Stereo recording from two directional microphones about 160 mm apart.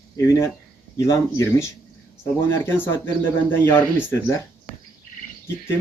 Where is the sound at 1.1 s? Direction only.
20° left (ahead or behind).